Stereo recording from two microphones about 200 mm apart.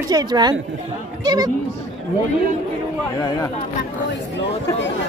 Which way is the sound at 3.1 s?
15° left (ahead or behind).